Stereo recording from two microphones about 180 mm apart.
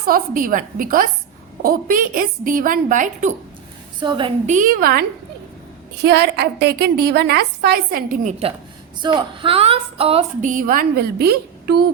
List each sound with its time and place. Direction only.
0.0 s a woman's voice: 50° right (ahead or behind)
4.0 s a woman's voice: 25° right (ahead or behind)
4.4 s a woman's voice: 45° right (ahead or behind)
6.0 s a woman's voice: 70° right (ahead or behind); by 8.5 s 35° right (ahead or behind)
9.0 s a woman's voice: 25° right (ahead or behind); by 11.9 s 65° right (ahead or behind)